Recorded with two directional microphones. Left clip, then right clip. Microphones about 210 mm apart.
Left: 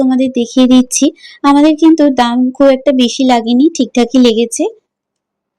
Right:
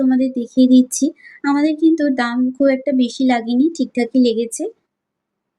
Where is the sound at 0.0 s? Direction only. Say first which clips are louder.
Left 6 dB; 30° left (ahead or behind).